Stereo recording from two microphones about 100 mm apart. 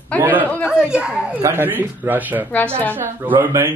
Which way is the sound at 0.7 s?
10° right (ahead or behind).